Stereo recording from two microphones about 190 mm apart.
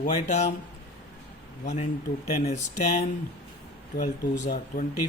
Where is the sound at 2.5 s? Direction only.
35° left (ahead or behind).